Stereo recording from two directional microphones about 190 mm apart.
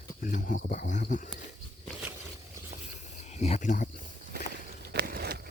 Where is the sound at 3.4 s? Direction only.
40° left (ahead or behind).